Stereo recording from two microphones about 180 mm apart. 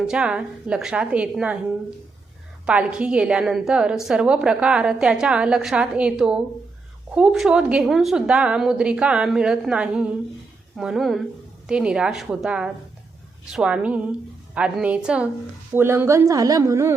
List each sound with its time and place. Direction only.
0.1 s a woman's voice: 5° right (ahead or behind)
2.6 s a woman's voice: 5° right (ahead or behind)